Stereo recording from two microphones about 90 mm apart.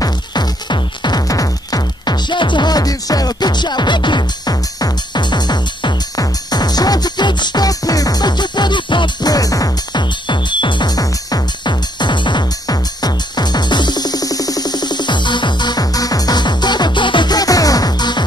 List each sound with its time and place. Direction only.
0.0 s music: 50° left (ahead or behind)
9.3 s music: 40° left (ahead or behind)
10.2 s music: 60° left (ahead or behind)
11.0 s music: 45° left (ahead or behind)